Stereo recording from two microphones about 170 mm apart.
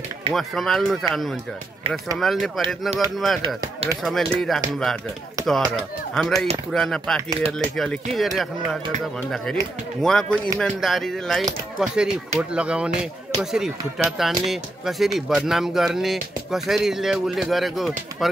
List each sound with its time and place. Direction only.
0.3 s speech: centre (ahead or behind)
3.4 s speech: 30° right (ahead or behind)
4.0 s speech: centre (ahead or behind)
10.0 s speech: 5° left (ahead or behind)